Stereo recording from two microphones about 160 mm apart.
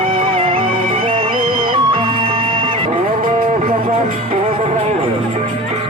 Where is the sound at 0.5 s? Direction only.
60° right (ahead or behind).